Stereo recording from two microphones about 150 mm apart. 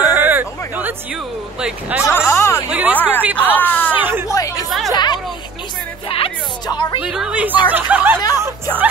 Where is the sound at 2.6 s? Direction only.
10° right (ahead or behind).